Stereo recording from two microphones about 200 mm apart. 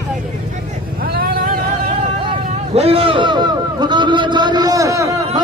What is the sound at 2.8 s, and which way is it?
A man's voice, 30° right (ahead or behind).